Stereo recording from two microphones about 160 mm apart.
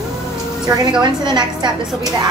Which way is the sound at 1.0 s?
30° right (ahead or behind).